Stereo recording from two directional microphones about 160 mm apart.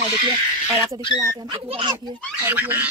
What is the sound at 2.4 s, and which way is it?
Speech, 10° right (ahead or behind).